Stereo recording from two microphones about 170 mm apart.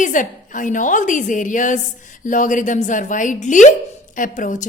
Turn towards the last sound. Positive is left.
turn(degrees=45)  # may be behind; listen again after turning